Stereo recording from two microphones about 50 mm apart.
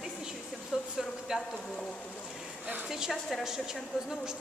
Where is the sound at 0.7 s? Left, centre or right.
Right.